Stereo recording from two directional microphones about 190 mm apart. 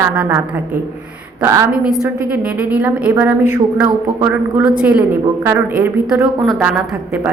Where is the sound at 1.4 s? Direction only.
15° right (ahead or behind).